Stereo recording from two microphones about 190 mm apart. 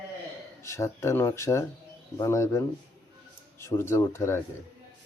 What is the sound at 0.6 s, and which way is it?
Speech, 15° left (ahead or behind).